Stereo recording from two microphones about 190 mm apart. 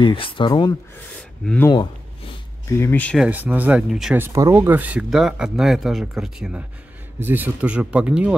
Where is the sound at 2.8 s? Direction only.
10° left (ahead or behind).